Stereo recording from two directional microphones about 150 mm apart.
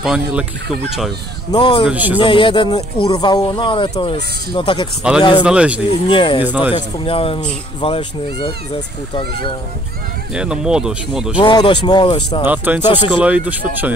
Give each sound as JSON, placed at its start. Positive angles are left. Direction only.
{"t": 0.0, "sound": "speech", "side_deg": -5}
{"t": 1.5, "sound": "speech", "side_deg": 35}
{"t": 1.9, "sound": "speech", "side_deg": -10}
{"t": 2.1, "sound": "speech", "side_deg": 35}
{"t": 5.1, "sound": "speech", "side_deg": -5}
{"t": 6.0, "sound": "speech", "side_deg": 35}
{"t": 6.4, "sound": "speech", "side_deg": -10}
{"t": 6.7, "sound": "speech", "side_deg": 40}
{"t": 10.3, "sound": "speech", "side_deg": -5}
{"t": 11.3, "sound": "speech", "side_deg": 30}
{"t": 12.4, "sound": "speech", "side_deg": -15}